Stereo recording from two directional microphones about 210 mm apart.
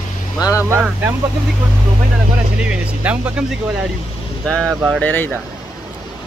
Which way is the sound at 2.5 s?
5° right (ahead or behind).